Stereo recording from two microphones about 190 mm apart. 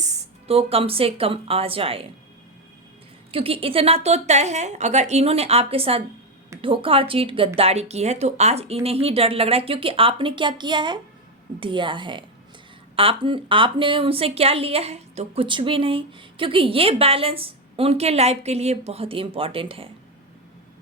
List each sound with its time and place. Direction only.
0.0 s speech: 35° right (ahead or behind)
3.3 s a woman's voice: 30° right (ahead or behind)